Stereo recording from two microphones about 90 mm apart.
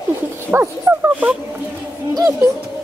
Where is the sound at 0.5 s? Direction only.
20° right (ahead or behind).